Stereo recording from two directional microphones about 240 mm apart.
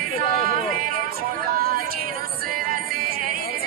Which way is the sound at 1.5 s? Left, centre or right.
Right.